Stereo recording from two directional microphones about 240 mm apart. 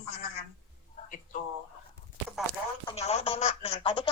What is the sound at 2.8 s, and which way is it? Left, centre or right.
Speech, left.